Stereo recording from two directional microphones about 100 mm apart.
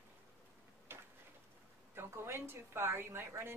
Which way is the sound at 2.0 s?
25° right (ahead or behind).